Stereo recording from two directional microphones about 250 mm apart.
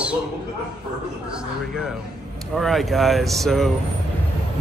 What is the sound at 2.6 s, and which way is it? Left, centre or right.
Speech, centre.